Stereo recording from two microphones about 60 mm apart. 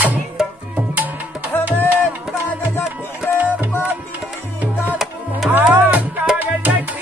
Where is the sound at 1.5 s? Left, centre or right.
Left.